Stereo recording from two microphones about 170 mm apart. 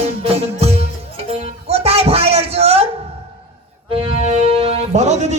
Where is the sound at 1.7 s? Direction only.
35° right (ahead or behind).